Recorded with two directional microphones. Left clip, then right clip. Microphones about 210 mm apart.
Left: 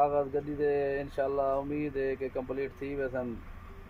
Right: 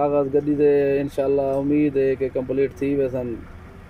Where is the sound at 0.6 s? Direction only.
10° right (ahead or behind).